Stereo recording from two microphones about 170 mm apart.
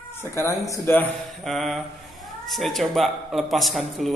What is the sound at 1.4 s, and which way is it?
A man's voice, centre (ahead or behind).